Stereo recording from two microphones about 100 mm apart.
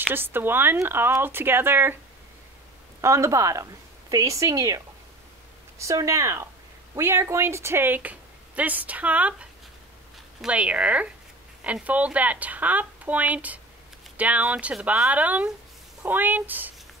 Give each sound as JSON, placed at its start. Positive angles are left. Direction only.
{"t": 0.1, "sound": "speech", "side_deg": -20}
{"t": 3.0, "sound": "a woman's voice", "side_deg": -30}